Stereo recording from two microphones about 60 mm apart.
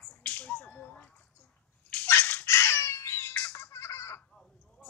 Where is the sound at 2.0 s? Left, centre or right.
Left.